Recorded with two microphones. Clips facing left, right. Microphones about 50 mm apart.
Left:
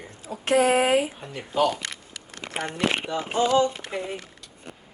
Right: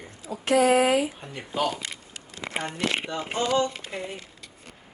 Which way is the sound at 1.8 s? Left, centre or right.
Left.